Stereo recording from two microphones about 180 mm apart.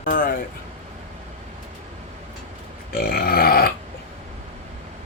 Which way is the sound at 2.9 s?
55° left (ahead or behind).